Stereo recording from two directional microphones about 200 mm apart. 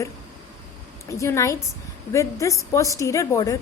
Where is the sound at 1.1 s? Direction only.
15° left (ahead or behind).